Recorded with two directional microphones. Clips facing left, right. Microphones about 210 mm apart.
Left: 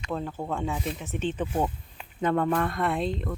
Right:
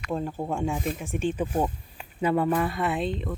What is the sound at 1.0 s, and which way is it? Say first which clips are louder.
Speech: right 2 dB; 10° right (ahead or behind).